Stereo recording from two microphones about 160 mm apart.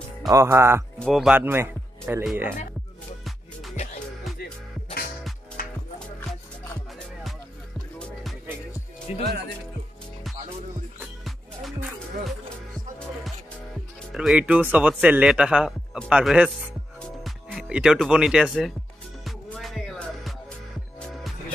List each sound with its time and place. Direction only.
0.3 s a man's voice: 15° right (ahead or behind)
0.9 s speech: 5° left (ahead or behind)
1.3 s speech: 15° right (ahead or behind)
3.7 s music: 45° left (ahead or behind)
5.6 s music: 60° left (ahead or behind)
8.0 s music: centre (ahead or behind)
9.1 s speech: 40° left (ahead or behind)
14.1 s a man's voice: 5° right (ahead or behind)
19.2 s music: centre (ahead or behind)